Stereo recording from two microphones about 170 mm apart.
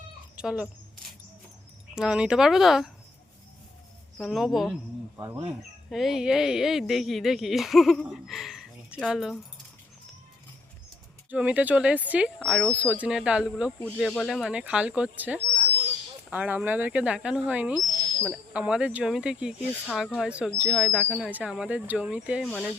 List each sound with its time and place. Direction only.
0.3 s speech: 5° right (ahead or behind)
2.0 s speech: 5° right (ahead or behind)
4.2 s speech: centre (ahead or behind)
5.1 s speech: 15° right (ahead or behind)
5.9 s speech: centre (ahead or behind)
11.3 s speech: 10° right (ahead or behind)
14.4 s speech: 5° right (ahead or behind)
22.4 s speech: 10° left (ahead or behind)